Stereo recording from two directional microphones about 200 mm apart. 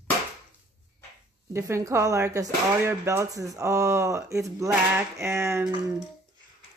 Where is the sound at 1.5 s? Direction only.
15° right (ahead or behind).